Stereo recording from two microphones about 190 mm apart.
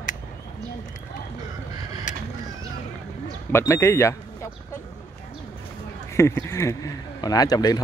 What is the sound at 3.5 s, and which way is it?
Speech, 15° left (ahead or behind).